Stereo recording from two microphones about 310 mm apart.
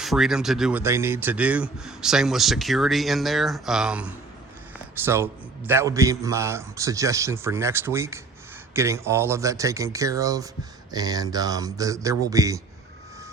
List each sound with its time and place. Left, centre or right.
0.0 s a man's voice: centre